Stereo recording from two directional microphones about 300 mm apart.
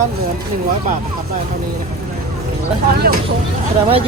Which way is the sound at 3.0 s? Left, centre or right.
Right.